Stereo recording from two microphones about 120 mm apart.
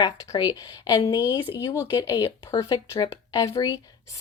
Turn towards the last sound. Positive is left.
turn(degrees=25)  # may be behind; listen again after turning